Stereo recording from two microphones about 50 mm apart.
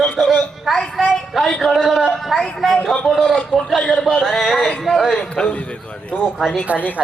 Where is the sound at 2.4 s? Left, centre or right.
Centre.